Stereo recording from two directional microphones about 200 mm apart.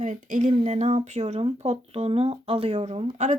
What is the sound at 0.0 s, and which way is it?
Speech, 35° right (ahead or behind).